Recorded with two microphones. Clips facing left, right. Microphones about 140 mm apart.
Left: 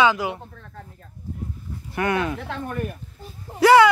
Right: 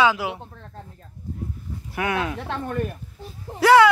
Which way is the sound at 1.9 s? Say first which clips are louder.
Left 2 dB; 5° right (ahead or behind).